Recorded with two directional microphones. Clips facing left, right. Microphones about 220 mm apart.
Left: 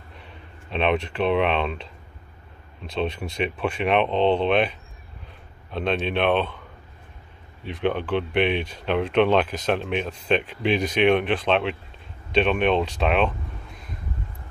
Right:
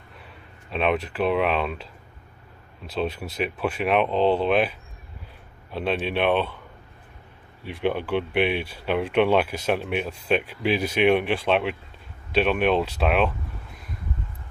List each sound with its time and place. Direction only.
0.2 s speech: 5° right (ahead or behind)
2.9 s speech: 5° right (ahead or behind)
7.6 s speech: 10° right (ahead or behind)